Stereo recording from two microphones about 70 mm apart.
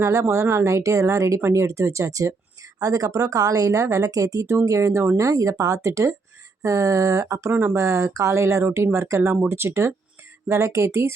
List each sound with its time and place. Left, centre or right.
0.0 s speech: right
7.5 s speech: right
7.8 s speech: right